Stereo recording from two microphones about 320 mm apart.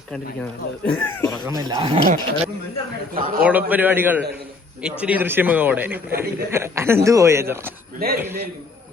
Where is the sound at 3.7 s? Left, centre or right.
Centre.